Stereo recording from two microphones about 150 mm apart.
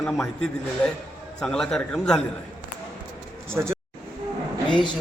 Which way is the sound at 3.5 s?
15° right (ahead or behind).